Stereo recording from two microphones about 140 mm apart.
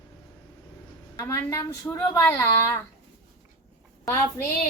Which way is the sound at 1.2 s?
25° left (ahead or behind).